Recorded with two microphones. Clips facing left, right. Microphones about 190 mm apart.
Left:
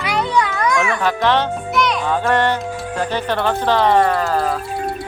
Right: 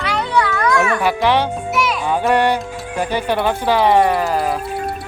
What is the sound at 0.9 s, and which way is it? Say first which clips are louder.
A child's voice: right 1 dB; 10° right (ahead or behind).